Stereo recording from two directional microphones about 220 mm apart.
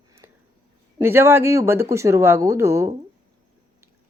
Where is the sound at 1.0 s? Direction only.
10° right (ahead or behind).